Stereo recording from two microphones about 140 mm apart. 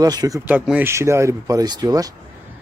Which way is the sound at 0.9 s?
20° right (ahead or behind).